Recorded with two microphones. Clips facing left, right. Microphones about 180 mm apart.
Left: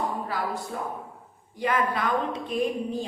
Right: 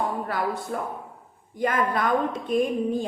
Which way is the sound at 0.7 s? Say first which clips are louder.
Right 2 dB; 55° right (ahead or behind).